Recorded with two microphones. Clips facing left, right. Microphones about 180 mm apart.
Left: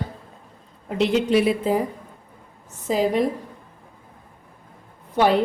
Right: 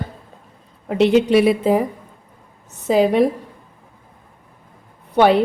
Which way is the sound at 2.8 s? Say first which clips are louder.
Right 6 dB; 70° right (ahead or behind).